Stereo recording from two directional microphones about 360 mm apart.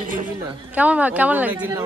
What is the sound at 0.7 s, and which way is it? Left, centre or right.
Speech, centre.